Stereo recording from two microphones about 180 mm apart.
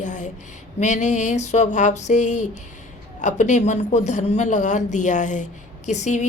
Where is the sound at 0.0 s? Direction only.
45° left (ahead or behind).